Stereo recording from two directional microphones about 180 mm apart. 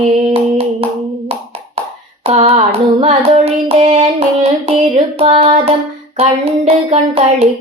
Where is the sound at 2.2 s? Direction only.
35° right (ahead or behind).